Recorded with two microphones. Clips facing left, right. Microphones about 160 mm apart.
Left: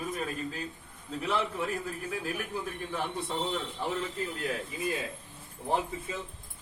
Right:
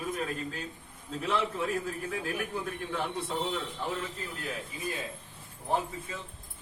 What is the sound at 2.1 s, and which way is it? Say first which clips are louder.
Speech: even; centre (ahead or behind).